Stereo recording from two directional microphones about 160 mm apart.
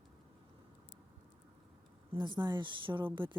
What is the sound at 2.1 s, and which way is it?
A woman's voice, 30° right (ahead or behind).